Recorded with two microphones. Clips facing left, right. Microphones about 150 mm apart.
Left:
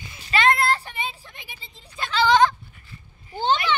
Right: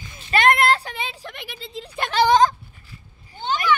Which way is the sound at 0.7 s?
90° right.